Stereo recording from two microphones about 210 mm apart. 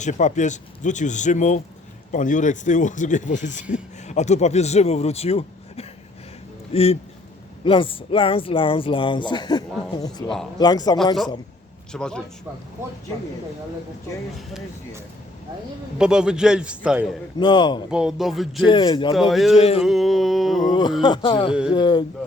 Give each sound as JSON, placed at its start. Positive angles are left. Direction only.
{"t": 0.0, "sound": "speech", "side_deg": 35}
{"t": 11.9, "sound": "a man's voice", "side_deg": 5}
{"t": 16.0, "sound": "a man's voice", "side_deg": -5}
{"t": 17.4, "sound": "speech", "side_deg": 20}
{"t": 17.9, "sound": "a man's voice", "side_deg": 0}
{"t": 18.6, "sound": "speech", "side_deg": 25}
{"t": 19.3, "sound": "a man's voice", "side_deg": 0}
{"t": 19.5, "sound": "speech", "side_deg": 30}
{"t": 19.8, "sound": "a man's voice", "side_deg": 0}
{"t": 21.0, "sound": "speech", "side_deg": 20}